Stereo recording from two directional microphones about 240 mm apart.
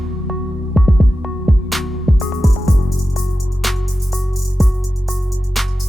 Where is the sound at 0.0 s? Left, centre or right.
Centre.